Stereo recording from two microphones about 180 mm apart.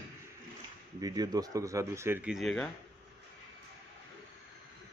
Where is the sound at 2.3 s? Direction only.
5° left (ahead or behind).